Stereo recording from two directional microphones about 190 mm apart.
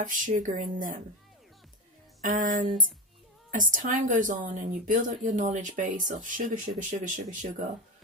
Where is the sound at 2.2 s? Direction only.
45° right (ahead or behind).